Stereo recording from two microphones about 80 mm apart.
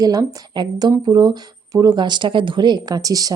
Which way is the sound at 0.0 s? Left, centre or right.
Right.